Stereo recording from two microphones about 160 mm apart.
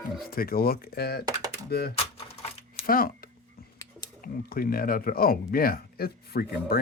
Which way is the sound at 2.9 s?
65° left (ahead or behind).